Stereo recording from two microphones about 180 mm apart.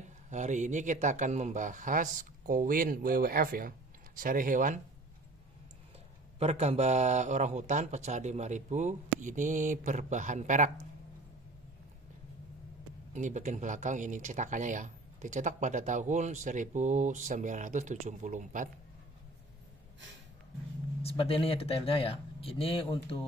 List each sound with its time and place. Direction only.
0.3 s speech: 40° right (ahead or behind)
6.4 s speech: 35° right (ahead or behind)
13.1 s speech: 45° right (ahead or behind)
21.0 s speech: 30° left (ahead or behind)